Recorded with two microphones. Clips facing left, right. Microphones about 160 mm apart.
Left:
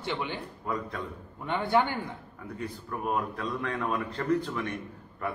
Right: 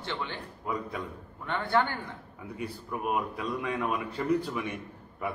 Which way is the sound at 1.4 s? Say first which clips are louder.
Left 2 dB; 15° left (ahead or behind).